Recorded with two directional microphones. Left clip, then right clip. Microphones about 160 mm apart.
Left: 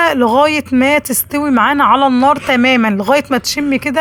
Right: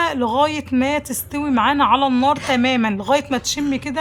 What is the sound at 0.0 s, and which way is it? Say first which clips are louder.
Speech: left 7 dB; 30° left (ahead or behind).